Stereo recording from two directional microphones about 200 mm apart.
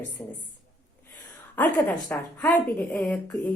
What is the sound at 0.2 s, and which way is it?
Speech, 20° left (ahead or behind).